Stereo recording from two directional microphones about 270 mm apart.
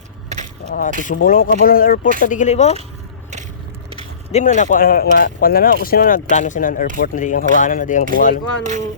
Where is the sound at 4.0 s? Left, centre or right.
Left.